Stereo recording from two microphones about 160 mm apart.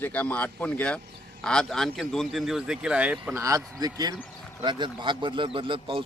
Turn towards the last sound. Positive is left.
turn(degrees=-35)  # may be behind; listen again after turning